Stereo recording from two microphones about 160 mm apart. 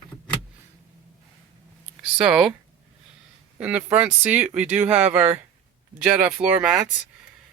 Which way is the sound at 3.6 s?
10° right (ahead or behind).